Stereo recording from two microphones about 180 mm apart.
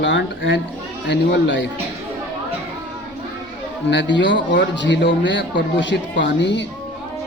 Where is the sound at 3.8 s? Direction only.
80° left.